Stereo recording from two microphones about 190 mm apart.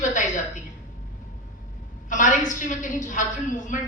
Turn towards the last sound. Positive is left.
turn(degrees=40)  # may be behind; listen again after turning